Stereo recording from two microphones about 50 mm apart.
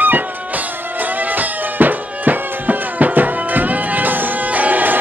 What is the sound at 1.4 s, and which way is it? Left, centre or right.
Music, right.